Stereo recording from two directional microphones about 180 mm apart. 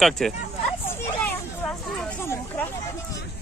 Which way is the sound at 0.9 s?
10° left (ahead or behind).